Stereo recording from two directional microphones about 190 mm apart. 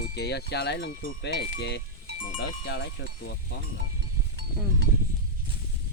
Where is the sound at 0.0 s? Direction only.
60° left (ahead or behind).